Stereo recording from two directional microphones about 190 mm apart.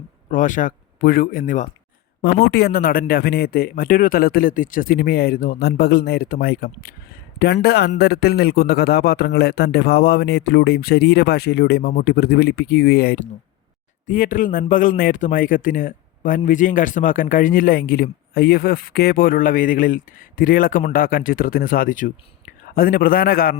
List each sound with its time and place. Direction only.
0.3 s speech: 45° left (ahead or behind)
2.2 s a man's voice: 55° left (ahead or behind)